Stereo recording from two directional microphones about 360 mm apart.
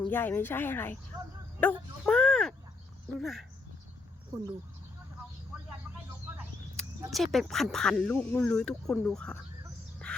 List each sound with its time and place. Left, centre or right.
0.1 s speech: centre
2.0 s a sound: centre
3.2 s speech: centre
6.3 s speech: centre
10.1 s bird: centre